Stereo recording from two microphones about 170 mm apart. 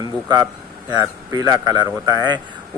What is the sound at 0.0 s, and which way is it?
A man's voice, 25° right (ahead or behind).